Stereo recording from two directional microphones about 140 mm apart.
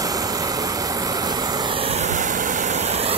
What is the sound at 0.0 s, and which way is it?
Vehicle, 25° right (ahead or behind).